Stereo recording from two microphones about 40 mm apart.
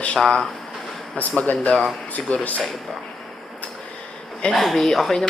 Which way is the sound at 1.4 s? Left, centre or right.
Left.